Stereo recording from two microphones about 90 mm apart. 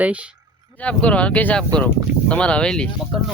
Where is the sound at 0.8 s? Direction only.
15° left (ahead or behind).